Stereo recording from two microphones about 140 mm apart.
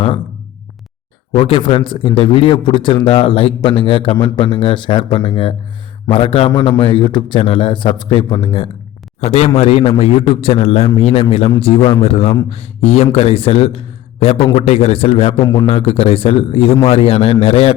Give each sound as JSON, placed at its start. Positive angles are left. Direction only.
{"t": 1.4, "sound": "a man's voice", "side_deg": 40}
{"t": 15.4, "sound": "a man's voice", "side_deg": 25}
{"t": 15.6, "sound": "a man's voice", "side_deg": 45}